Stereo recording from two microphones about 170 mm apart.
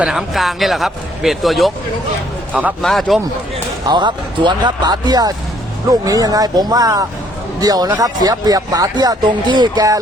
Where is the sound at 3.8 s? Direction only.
25° right (ahead or behind).